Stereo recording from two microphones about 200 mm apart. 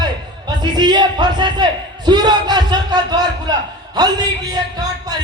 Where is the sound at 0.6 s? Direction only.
20° right (ahead or behind).